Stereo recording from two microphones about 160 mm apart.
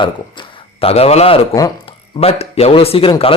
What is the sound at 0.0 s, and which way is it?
A man's voice, 35° left (ahead or behind).